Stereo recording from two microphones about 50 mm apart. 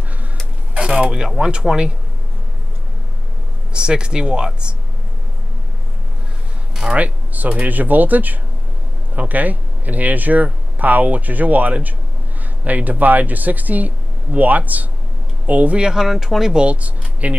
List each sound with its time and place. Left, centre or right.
0.7 s speech: centre
3.7 s speech: centre
6.7 s a sound: centre
7.0 s speech: right
15.8 s speech: centre
16.5 s speech: right